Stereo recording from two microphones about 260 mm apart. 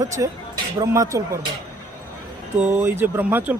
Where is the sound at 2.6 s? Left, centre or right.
Centre.